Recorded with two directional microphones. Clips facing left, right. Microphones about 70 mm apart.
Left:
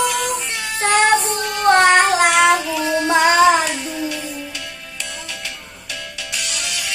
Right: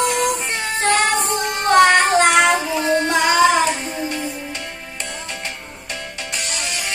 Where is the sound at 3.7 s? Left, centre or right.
Right.